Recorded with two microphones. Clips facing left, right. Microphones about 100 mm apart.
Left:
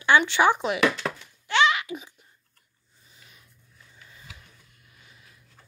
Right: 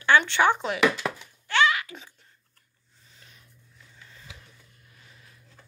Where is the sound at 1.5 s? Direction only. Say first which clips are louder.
Left 1 dB; 20° left (ahead or behind).